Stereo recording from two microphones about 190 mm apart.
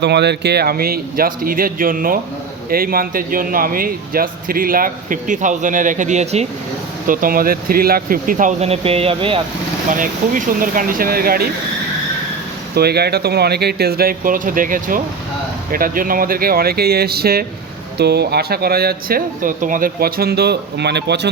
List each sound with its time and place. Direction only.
0.0 s speech: 65° right (ahead or behind); by 9.4 s 30° right (ahead or behind)
9.9 s speech: 45° right (ahead or behind)
12.7 s speech: 55° right (ahead or behind)